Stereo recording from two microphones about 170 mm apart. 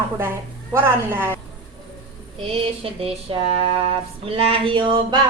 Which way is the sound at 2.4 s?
35° right (ahead or behind).